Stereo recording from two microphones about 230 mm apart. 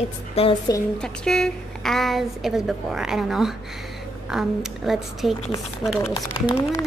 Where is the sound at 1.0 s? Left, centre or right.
Centre.